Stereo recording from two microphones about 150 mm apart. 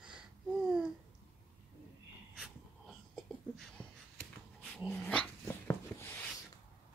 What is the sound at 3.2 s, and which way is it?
Wheeze, 5° left (ahead or behind).